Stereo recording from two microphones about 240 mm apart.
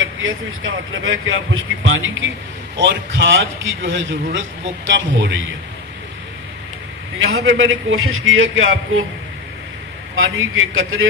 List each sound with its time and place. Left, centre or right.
0.0 s a man's voice: right
7.2 s speech: right
10.1 s speech: right